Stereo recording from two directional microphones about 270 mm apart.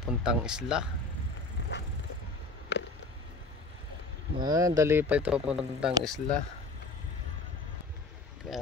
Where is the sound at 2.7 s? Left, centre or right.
Left.